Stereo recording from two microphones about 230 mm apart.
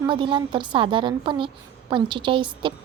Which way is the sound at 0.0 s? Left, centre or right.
Right.